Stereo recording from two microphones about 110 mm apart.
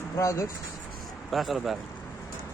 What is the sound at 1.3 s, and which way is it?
Speech, centre (ahead or behind).